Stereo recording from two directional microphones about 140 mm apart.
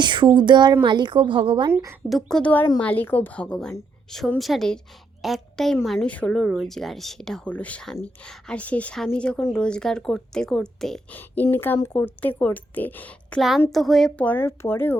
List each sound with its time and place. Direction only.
0.0 s a woman's voice: 35° right (ahead or behind)
1.7 s speech: 20° right (ahead or behind)
2.0 s speech: centre (ahead or behind)
11.5 s speech: 15° left (ahead or behind)